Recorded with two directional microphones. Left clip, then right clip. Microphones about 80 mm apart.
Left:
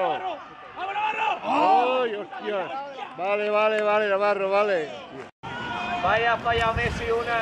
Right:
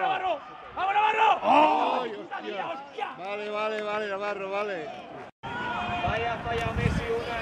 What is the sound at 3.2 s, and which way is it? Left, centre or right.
Speech, left.